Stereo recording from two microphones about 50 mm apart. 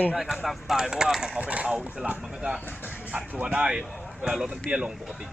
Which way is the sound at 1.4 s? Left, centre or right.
Right.